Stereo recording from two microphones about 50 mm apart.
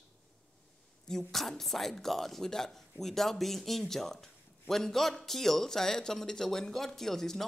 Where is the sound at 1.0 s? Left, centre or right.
Centre.